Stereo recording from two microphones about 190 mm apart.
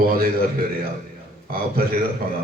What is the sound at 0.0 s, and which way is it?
Speech, 50° right (ahead or behind).